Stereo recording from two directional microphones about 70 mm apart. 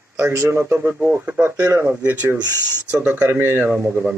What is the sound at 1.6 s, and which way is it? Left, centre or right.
Speech, right.